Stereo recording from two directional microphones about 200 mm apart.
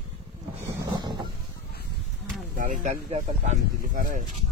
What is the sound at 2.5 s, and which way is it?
Speech, 40° right (ahead or behind).